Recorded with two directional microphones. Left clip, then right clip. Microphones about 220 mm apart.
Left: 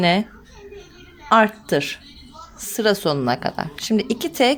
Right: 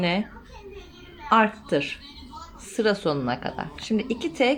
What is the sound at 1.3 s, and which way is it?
A woman's voice, 50° left (ahead or behind).